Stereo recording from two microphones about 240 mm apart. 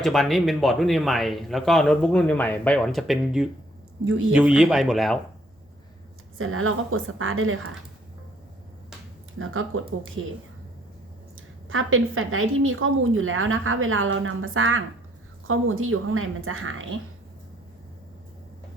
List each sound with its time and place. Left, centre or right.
0.0 s a man's voice: centre
6.4 s a woman's voice: right
9.4 s a woman's voice: right
11.3 s a woman's voice: right